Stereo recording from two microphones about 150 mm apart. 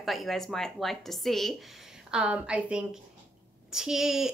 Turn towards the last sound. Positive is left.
turn(degrees=-5)  # may be behind; listen again after turning